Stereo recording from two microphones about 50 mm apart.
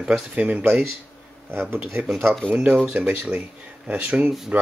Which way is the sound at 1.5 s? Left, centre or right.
Right.